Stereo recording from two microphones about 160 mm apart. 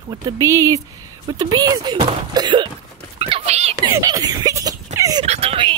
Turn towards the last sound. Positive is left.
turn(degrees=-35)  # may be behind; listen again after turning